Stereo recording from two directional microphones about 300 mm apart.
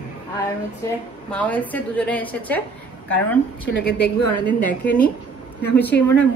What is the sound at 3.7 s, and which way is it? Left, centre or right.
Speech, left.